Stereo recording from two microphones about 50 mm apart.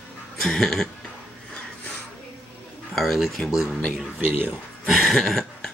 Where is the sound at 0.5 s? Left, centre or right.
Centre.